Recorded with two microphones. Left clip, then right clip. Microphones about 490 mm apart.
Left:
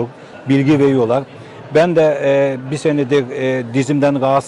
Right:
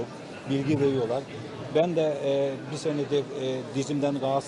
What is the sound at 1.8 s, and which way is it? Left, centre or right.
A man's voice, left.